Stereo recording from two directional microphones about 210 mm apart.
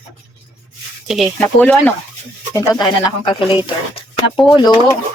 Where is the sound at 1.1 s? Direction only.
Centre (ahead or behind); by 4.1 s 25° left (ahead or behind).